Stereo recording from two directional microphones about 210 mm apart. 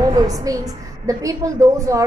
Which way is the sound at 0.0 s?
15° right (ahead or behind).